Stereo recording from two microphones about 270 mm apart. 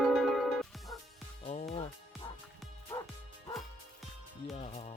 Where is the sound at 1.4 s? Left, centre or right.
Left.